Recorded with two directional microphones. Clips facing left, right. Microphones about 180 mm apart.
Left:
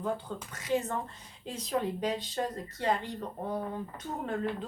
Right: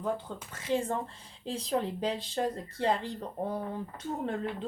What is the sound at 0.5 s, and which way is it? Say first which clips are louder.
Speech: right 1 dB; 30° right (ahead or behind).